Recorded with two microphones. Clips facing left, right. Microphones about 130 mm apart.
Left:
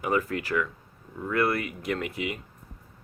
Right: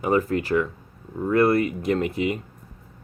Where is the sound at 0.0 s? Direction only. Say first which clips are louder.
Right 5 dB; 30° right (ahead or behind).